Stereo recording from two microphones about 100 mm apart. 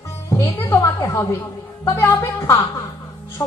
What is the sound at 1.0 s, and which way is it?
A woman's voice, 30° left (ahead or behind).